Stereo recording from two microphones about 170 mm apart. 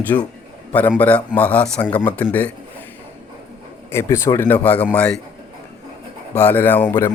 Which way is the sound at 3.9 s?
15° left (ahead or behind).